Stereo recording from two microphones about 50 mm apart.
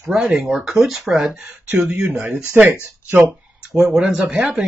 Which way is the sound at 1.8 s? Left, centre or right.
Right.